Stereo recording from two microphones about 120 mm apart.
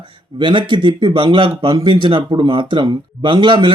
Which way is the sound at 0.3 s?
40° right (ahead or behind).